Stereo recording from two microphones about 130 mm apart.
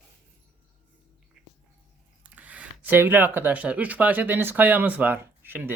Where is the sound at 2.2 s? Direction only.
10° right (ahead or behind).